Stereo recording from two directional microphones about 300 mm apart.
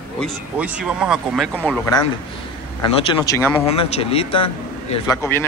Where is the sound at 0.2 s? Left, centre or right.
Centre.